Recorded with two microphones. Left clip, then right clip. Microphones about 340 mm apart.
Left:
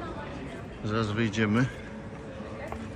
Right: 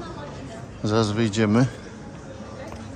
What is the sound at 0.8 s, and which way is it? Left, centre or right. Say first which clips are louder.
Speech: right 7 dB; centre.